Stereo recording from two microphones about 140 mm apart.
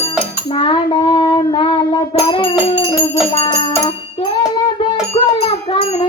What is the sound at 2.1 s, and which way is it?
Music, 40° left (ahead or behind).